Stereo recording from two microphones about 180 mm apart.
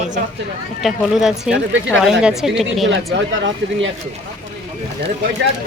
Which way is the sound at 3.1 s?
90° right.